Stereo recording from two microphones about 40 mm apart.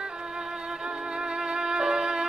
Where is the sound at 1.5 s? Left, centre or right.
Centre.